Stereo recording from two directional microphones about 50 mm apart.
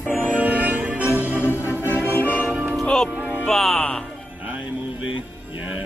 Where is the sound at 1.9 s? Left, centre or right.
Left.